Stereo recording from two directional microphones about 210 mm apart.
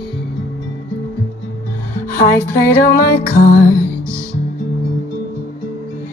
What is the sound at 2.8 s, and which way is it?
Music, 45° left (ahead or behind).